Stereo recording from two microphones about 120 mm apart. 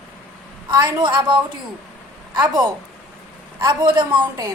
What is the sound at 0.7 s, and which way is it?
A woman's voice, 35° right (ahead or behind).